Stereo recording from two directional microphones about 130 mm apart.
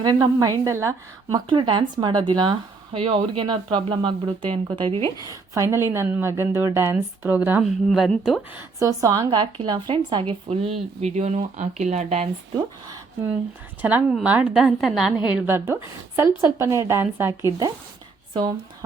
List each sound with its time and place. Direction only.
0.0 s a woman's voice: 30° right (ahead or behind)
1.3 s speech: 40° right (ahead or behind)
4.9 s a woman's voice: 25° left (ahead or behind)
5.3 s a woman's voice: 20° right (ahead or behind)
7.6 s a woman's voice: centre (ahead or behind)
8.8 s a woman's voice: 25° right (ahead or behind); by 12.3 s 55° right (ahead or behind)
13.8 s a woman's voice: 10° right (ahead or behind)
15.4 s a woman's voice: 15° right (ahead or behind)